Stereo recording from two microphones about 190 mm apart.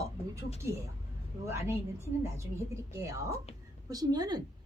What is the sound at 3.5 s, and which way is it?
Speech, 35° left (ahead or behind).